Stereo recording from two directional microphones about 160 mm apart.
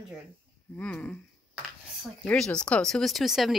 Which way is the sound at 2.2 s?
5° left (ahead or behind).